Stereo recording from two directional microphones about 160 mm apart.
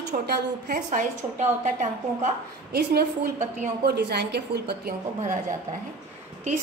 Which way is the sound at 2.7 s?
90° right.